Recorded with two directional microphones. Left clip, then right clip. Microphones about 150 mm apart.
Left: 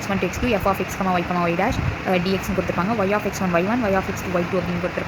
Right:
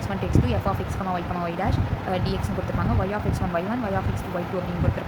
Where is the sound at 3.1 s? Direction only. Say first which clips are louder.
Left 6 dB; 30° left (ahead or behind).